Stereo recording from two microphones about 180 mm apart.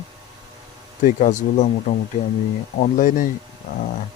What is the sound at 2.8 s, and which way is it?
Speech, 45° left (ahead or behind).